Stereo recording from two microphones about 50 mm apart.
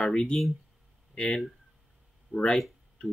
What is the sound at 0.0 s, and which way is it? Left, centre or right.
Speech, centre.